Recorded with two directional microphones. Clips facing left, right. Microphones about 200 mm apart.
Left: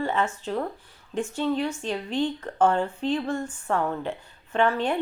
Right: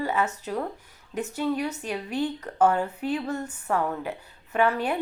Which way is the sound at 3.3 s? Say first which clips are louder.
Left 2 dB; 40° right (ahead or behind).